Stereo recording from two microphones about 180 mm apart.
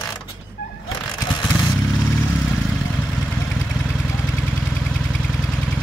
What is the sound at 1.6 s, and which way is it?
Motorcycle, centre (ahead or behind).